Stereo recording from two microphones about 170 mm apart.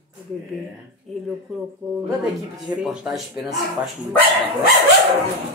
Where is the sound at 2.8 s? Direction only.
5° right (ahead or behind).